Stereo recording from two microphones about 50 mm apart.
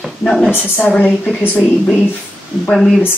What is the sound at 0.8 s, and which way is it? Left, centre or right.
Speech, left.